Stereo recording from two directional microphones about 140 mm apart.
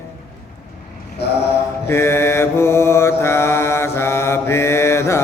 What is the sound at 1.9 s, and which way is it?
Mantra, 20° left (ahead or behind).